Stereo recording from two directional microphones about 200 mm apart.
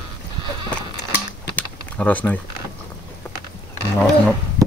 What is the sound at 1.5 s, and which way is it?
Typing, 5° left (ahead or behind).